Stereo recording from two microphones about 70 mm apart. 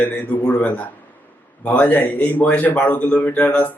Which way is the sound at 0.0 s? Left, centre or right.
Left.